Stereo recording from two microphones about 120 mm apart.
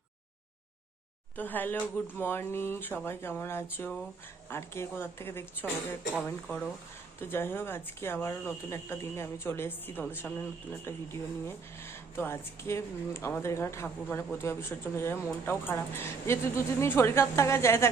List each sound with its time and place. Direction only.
1.4 s speech: 15° left (ahead or behind)